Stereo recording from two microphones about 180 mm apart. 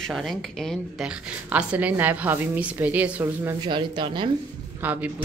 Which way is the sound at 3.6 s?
25° right (ahead or behind).